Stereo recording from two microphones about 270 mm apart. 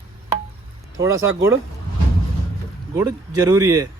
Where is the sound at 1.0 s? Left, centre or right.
Centre.